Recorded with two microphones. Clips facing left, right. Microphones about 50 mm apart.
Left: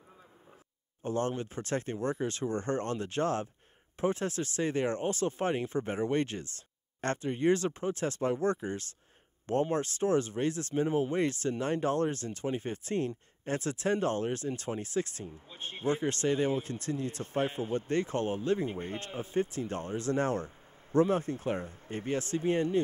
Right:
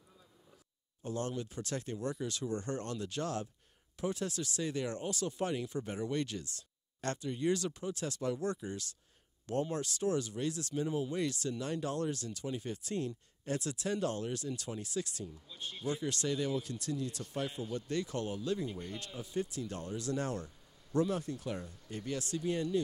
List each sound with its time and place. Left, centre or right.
1.0 s speech: left